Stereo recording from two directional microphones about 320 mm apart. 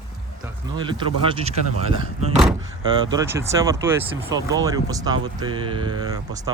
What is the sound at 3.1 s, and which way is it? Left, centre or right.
Speech, centre.